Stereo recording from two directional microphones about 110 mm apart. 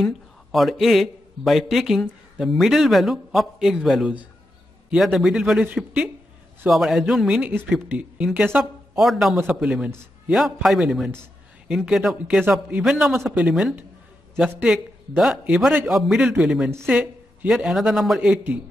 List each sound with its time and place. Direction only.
0.0 s a man's voice: centre (ahead or behind)
9.8 s a man's voice: 25° right (ahead or behind)
10.3 s a man's voice: centre (ahead or behind)